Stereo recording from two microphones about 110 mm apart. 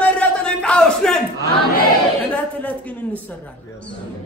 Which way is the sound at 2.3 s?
15° left (ahead or behind).